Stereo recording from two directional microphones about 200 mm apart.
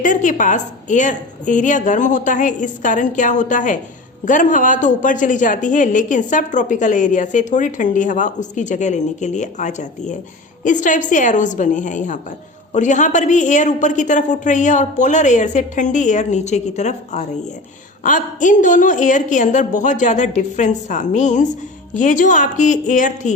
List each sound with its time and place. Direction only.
0.0 s a woman's voice: 40° left (ahead or behind)